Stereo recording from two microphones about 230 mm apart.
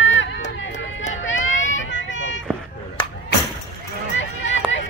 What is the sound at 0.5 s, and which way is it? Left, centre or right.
Music, left.